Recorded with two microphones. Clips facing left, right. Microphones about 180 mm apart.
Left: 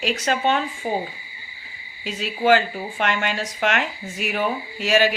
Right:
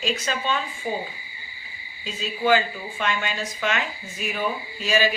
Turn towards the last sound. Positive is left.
turn(degrees=70)  # may be behind; listen again after turning